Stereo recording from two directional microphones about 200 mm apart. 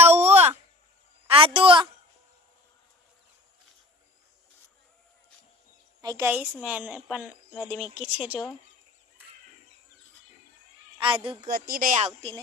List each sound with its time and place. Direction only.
0.0 s a sound: 30° right (ahead or behind)
1.3 s a woman's voice: 25° right (ahead or behind)
6.0 s a woman's voice: 15° right (ahead or behind)
11.4 s speech: 45° right (ahead or behind); by 12.4 s 30° right (ahead or behind)